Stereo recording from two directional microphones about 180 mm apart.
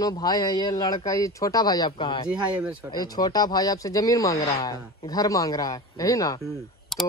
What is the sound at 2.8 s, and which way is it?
Speech, 20° left (ahead or behind).